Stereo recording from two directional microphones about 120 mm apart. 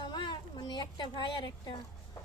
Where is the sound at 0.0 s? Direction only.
40° left (ahead or behind).